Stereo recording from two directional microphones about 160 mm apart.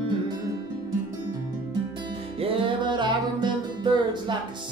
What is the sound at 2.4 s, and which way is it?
Music, 30° right (ahead or behind).